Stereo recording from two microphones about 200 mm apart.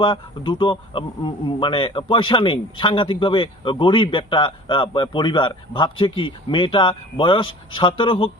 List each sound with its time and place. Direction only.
0.0 s speech: 25° left (ahead or behind)